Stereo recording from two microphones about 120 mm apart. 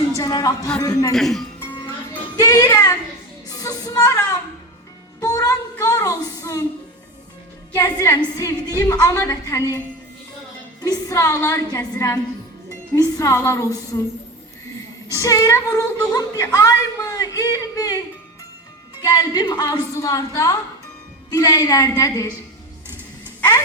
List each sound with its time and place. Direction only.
0.2 s a woman's voice: 30° left (ahead or behind)
1.1 s speech: centre (ahead or behind)
2.3 s speech: 35° left (ahead or behind)
3.5 s music: 30° left (ahead or behind)
5.2 s child singing: 30° left (ahead or behind)
5.8 s a woman's voice: 30° left (ahead or behind)
7.7 s a woman's voice: 30° left (ahead or behind)
10.8 s a woman's voice: 30° left (ahead or behind)
15.1 s a woman's voice: 30° left (ahead or behind)
19.0 s speech: 35° left (ahead or behind)